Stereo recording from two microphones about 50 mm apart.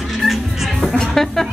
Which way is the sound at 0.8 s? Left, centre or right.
Centre.